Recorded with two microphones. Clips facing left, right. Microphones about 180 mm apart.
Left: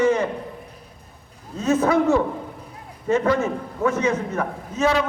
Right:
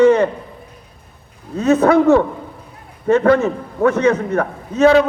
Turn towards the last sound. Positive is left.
turn(degrees=-65)  # may be behind; listen again after turning